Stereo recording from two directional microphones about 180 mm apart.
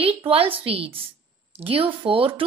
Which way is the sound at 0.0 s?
30° right (ahead or behind).